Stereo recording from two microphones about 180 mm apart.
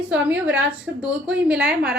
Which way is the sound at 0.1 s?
10° right (ahead or behind).